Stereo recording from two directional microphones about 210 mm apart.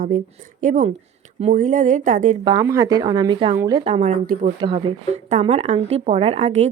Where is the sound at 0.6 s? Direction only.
35° right (ahead or behind).